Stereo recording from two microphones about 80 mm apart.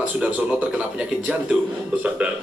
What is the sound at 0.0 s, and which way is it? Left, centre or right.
Speech, centre.